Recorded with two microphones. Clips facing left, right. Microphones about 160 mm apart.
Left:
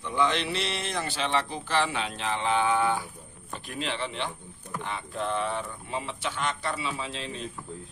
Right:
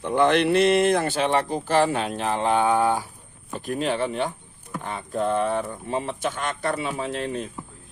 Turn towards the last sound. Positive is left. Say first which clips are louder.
# right 8 dB
turn(degrees=-50)  # may be behind; listen again after turning